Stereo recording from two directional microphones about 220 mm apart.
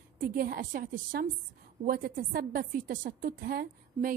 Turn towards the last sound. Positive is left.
turn(degrees=-40)  # may be behind; listen again after turning